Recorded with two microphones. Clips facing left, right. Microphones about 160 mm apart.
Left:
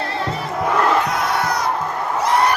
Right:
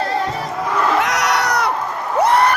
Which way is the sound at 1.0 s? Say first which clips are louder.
Right 2 dB; 80° right.